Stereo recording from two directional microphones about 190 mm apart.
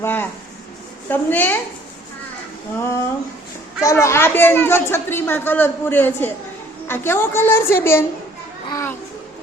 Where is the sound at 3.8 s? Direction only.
15° left (ahead or behind).